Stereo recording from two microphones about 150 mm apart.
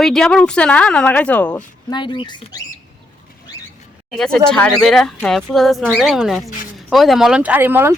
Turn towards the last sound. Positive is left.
turn(degrees=-15)  # may be behind; listen again after turning